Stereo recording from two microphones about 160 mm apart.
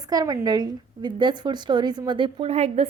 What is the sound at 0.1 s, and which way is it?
A woman's voice, 25° right (ahead or behind).